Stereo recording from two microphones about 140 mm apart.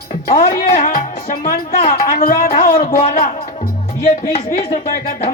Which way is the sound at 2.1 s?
80° left.